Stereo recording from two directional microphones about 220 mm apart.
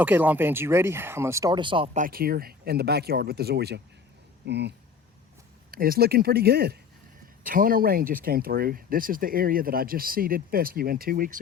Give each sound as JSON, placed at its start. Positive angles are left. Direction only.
{"t": 0.0, "sound": "speech", "side_deg": -10}
{"t": 2.0, "sound": "speech", "side_deg": -40}
{"t": 5.7, "sound": "speech", "side_deg": -40}